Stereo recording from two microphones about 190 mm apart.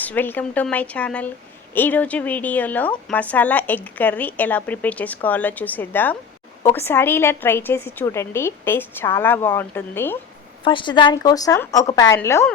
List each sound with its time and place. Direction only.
0.0 s a woman's voice: 10° left (ahead or behind)
10.6 s a woman's voice: 25° left (ahead or behind)